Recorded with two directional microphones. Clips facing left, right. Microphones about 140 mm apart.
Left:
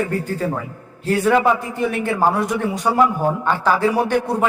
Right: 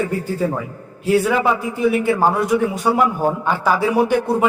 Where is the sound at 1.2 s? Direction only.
5° right (ahead or behind).